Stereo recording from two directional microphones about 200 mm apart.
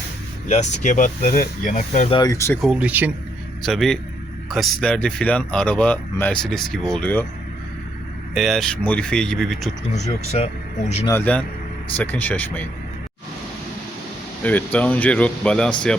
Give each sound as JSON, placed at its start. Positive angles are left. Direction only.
{"t": 0.4, "sound": "speech", "side_deg": 35}
{"t": 2.1, "sound": "speech", "side_deg": 15}
{"t": 2.6, "sound": "speech", "side_deg": -5}
{"t": 8.4, "sound": "speech", "side_deg": 0}
{"t": 10.3, "sound": "speech", "side_deg": 30}
{"t": 11.0, "sound": "speech", "side_deg": 10}
{"t": 14.4, "sound": "speech", "side_deg": 5}